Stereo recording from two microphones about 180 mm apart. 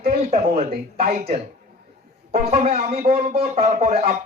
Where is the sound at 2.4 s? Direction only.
35° right (ahead or behind).